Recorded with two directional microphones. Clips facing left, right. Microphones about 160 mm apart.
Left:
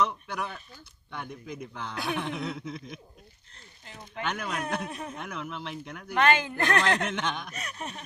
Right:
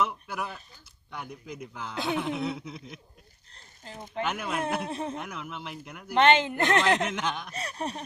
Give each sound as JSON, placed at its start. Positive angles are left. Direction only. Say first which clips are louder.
{"t": 0.0, "sound": "a sound", "louder": "left 1 dB", "side_deg": -5}
{"t": 1.1, "sound": "speech", "louder": "left 1 dB", "side_deg": -5}
{"t": 3.5, "sound": "a sound", "louder": "right 5 dB", "side_deg": -35}
{"t": 4.2, "sound": "speech", "louder": "right 2 dB", "side_deg": -5}
{"t": 4.8, "sound": "a woman's voice", "louder": "right 4 dB", "side_deg": -25}
{"t": 5.1, "sound": "speech", "louder": "even", "side_deg": 0}
{"t": 6.1, "sound": "a woman's voice", "louder": "right 3 dB", "side_deg": -25}
{"t": 7.1, "sound": "speech", "louder": "even", "side_deg": 0}
{"t": 7.5, "sound": "chuckle", "louder": "right 5 dB", "side_deg": -35}